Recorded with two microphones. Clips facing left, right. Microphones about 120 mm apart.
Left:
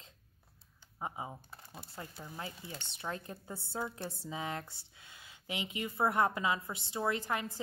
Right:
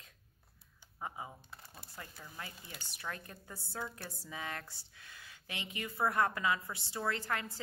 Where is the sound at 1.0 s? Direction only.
25° left (ahead or behind).